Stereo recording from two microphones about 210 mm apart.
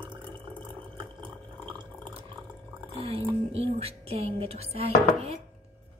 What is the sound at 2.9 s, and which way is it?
Music, 25° right (ahead or behind).